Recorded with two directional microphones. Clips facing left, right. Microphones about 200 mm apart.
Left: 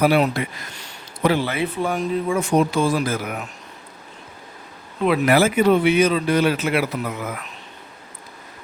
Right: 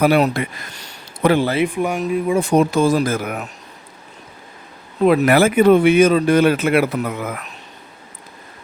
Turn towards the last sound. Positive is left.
turn(degrees=-55)  # may be behind; listen again after turning